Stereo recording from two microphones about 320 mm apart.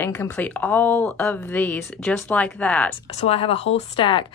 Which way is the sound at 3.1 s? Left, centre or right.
Centre.